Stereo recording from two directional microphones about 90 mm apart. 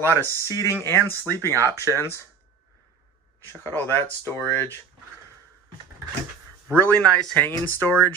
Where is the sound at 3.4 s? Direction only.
30° left (ahead or behind).